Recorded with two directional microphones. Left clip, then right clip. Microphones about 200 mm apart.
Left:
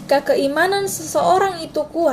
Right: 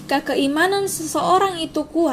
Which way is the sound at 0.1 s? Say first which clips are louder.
Left 4 dB; 15° right (ahead or behind).